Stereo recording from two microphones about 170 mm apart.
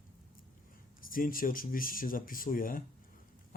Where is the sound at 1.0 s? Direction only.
55° left (ahead or behind).